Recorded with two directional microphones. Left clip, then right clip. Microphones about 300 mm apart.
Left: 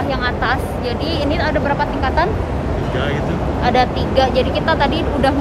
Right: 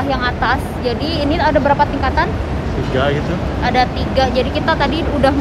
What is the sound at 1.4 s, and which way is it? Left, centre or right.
Speech, centre.